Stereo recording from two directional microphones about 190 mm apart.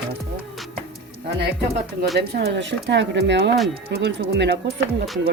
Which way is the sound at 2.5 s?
70° right (ahead or behind).